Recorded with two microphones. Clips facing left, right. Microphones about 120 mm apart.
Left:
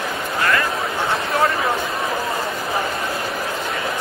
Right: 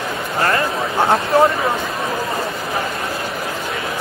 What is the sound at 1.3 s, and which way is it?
Speech, 35° right (ahead or behind).